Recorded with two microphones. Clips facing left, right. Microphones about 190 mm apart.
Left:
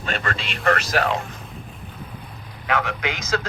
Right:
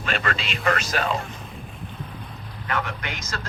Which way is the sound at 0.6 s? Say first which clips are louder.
Left 3 dB; 60° left (ahead or behind).